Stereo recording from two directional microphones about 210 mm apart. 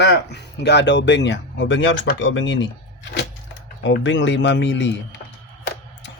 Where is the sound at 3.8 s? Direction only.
60° left (ahead or behind).